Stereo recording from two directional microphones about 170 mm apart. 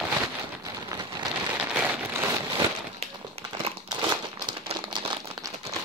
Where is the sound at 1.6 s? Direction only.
10° right (ahead or behind).